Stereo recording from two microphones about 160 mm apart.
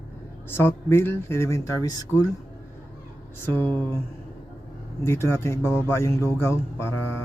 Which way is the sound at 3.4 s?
10° left (ahead or behind).